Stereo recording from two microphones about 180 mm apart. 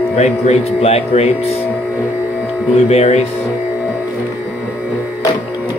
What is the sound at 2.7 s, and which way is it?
Speech, 35° left (ahead or behind).